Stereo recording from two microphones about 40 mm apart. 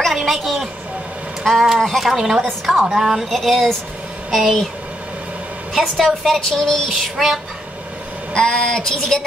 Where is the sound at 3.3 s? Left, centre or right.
Centre.